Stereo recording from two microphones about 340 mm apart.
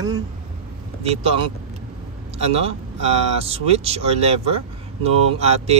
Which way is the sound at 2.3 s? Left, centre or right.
Centre.